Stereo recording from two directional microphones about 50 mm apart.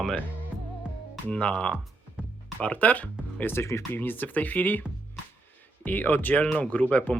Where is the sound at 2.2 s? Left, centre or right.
Right.